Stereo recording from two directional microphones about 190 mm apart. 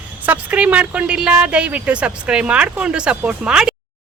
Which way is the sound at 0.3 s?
5° right (ahead or behind).